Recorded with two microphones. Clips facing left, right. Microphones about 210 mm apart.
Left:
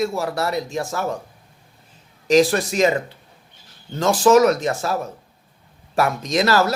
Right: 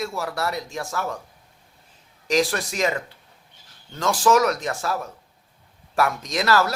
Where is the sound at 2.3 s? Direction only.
25° left (ahead or behind).